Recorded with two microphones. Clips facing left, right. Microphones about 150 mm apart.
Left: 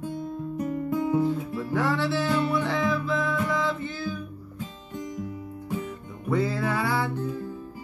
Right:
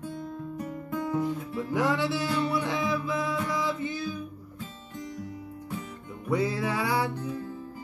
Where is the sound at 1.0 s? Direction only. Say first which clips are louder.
Left 4 dB; 15° left (ahead or behind).